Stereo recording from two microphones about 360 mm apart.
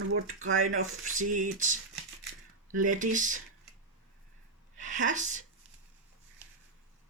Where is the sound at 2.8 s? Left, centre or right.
Right.